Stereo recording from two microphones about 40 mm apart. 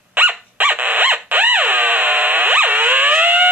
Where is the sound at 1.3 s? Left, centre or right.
Right.